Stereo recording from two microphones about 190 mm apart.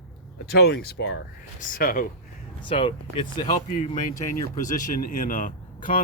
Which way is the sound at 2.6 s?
25° left (ahead or behind).